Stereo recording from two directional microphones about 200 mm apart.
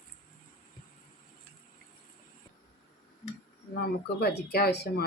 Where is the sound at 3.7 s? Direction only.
50° left (ahead or behind).